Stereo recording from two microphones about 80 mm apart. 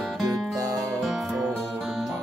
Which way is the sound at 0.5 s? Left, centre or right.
Right.